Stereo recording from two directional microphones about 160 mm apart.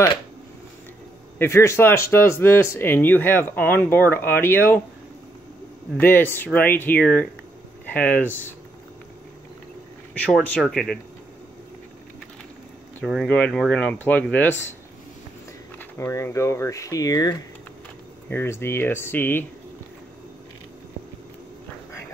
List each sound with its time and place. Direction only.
1.4 s speech: 15° left (ahead or behind)
5.9 s speech: 15° left (ahead or behind)
10.1 s speech: 5° left (ahead or behind)
13.0 s speech: 5° left (ahead or behind)
15.8 s speech: 15° left (ahead or behind)